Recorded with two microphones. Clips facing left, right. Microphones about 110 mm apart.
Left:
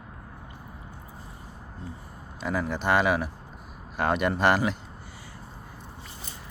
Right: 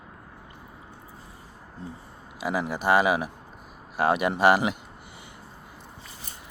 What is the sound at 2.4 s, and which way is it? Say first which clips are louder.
Speech: right 1 dB; 10° right (ahead or behind).